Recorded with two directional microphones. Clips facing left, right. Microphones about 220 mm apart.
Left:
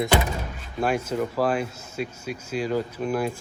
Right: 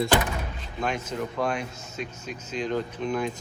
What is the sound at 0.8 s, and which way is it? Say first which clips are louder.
Speech: left 5 dB; 10° left (ahead or behind).